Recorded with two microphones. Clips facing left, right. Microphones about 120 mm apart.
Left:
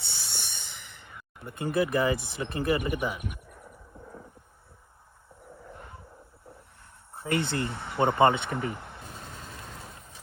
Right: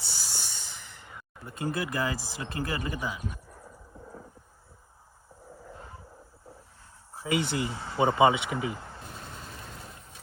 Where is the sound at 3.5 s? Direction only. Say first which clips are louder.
Even; 25° right (ahead or behind).